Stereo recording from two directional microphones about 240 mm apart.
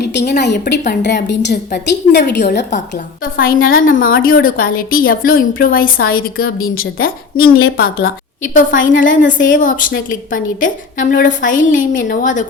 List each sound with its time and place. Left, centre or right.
0.1 s a woman's voice: left